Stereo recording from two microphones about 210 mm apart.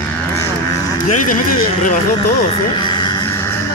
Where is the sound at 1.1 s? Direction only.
40° left (ahead or behind).